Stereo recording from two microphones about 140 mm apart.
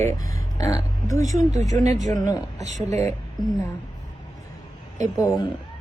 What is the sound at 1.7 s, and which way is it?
Speech, 60° right (ahead or behind).